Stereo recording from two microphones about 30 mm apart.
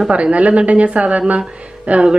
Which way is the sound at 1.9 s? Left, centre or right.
Right.